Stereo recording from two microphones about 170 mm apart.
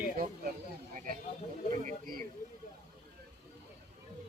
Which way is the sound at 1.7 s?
50° right (ahead or behind).